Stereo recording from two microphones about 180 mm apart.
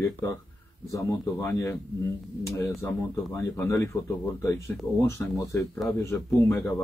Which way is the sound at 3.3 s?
15° left (ahead or behind).